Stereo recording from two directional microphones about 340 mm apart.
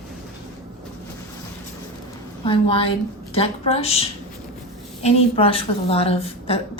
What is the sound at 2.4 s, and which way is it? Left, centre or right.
A woman's voice, centre.